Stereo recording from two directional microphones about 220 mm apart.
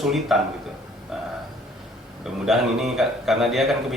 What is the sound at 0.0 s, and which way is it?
Speech, centre (ahead or behind).